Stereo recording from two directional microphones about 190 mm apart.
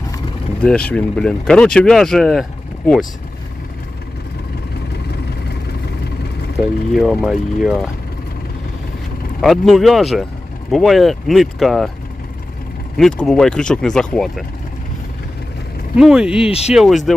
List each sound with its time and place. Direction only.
0.6 s speech: 5° left (ahead or behind)
6.9 s speech: centre (ahead or behind)
9.4 s speech: centre (ahead or behind)
13.0 s speech: centre (ahead or behind)
16.0 s speech: 5° right (ahead or behind)
16.5 s speech: 35° left (ahead or behind)
16.7 s speech: centre (ahead or behind)